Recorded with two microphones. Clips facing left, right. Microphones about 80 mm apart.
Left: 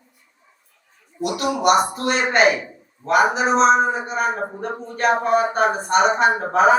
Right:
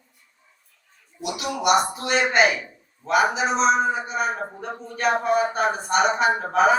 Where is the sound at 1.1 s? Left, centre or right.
Left.